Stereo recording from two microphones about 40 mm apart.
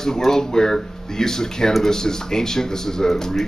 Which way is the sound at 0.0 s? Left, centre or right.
Centre.